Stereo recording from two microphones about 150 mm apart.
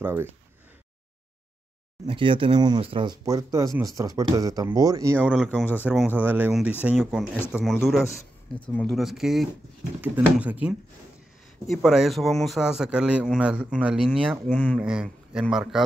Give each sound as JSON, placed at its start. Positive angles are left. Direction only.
{"t": 0.0, "sound": "speech", "side_deg": -15}
{"t": 2.0, "sound": "speech", "side_deg": -35}
{"t": 3.3, "sound": "speech", "side_deg": -20}
{"t": 5.5, "sound": "speech", "side_deg": 10}
{"t": 5.9, "sound": "speech", "side_deg": -10}
{"t": 14.5, "sound": "speech", "side_deg": 10}
{"t": 14.8, "sound": "speech", "side_deg": -5}